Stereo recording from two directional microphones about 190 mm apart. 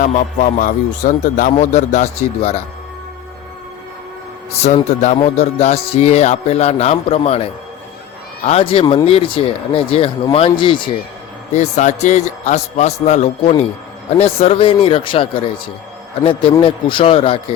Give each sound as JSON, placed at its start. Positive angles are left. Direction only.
{"t": 0.0, "sound": "speech", "side_deg": 45}
{"t": 4.6, "sound": "speech", "side_deg": 40}
{"t": 8.4, "sound": "speech", "side_deg": 30}
{"t": 11.5, "sound": "speech", "side_deg": 40}